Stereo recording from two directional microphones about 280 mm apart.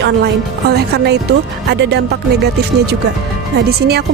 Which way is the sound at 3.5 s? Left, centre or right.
Right.